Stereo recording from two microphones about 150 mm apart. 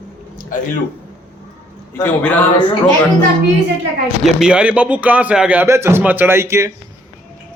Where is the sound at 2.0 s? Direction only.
10° left (ahead or behind).